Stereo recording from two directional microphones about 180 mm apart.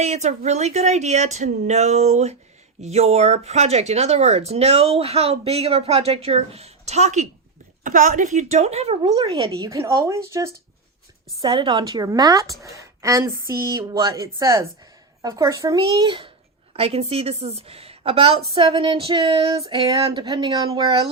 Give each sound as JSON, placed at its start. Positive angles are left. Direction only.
{"t": 0.0, "sound": "speech", "side_deg": -40}
{"t": 11.3, "sound": "a woman's voice", "side_deg": -25}